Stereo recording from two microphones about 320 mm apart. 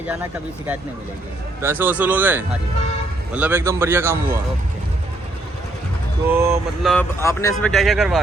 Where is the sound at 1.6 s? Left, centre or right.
Centre.